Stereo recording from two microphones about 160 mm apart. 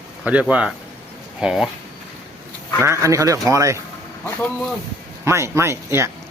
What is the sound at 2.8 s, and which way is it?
Speech, 20° right (ahead or behind).